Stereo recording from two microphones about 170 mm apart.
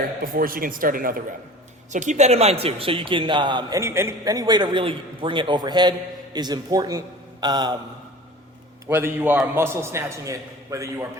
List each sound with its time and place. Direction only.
0.2 s speech: 55° right (ahead or behind)
1.9 s a man's voice: 45° right (ahead or behind); by 7.8 s 25° right (ahead or behind)
8.9 s a man's voice: 15° right (ahead or behind)